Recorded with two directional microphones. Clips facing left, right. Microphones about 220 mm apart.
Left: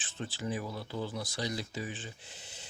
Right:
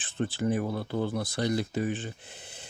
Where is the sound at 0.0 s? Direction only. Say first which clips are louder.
Right 9 dB; 55° right (ahead or behind).